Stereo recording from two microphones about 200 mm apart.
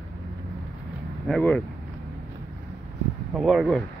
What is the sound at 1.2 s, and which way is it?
Speech, 5° left (ahead or behind).